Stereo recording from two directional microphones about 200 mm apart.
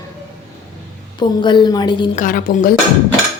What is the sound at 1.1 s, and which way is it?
Speech, 25° left (ahead or behind).